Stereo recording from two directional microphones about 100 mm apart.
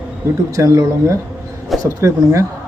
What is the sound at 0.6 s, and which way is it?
A man's voice, 30° right (ahead or behind).